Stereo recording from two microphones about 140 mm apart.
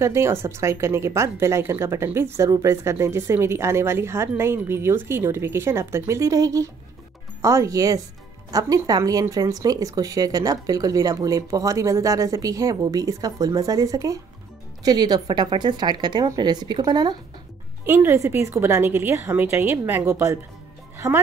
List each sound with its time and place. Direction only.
0.0 s speech: 20° right (ahead or behind)
17.8 s a woman's voice: 15° right (ahead or behind)